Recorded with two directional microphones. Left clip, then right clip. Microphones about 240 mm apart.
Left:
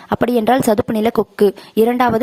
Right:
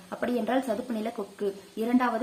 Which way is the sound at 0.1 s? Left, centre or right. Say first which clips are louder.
Left 14 dB; left.